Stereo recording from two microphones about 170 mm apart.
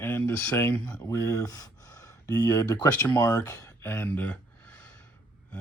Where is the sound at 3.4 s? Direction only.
20° left (ahead or behind).